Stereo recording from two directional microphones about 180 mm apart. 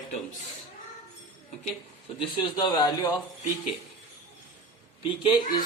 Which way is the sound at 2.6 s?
25° left (ahead or behind).